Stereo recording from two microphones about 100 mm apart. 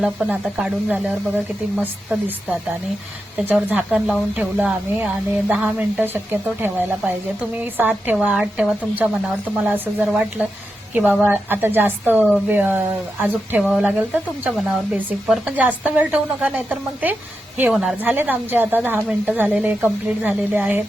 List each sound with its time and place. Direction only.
0.0 s a woman's voice: 5° right (ahead or behind)
9.0 s a woman's voice: 20° right (ahead or behind)